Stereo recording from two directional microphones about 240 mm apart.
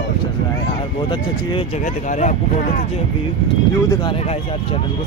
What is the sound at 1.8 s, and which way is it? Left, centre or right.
Speech, left.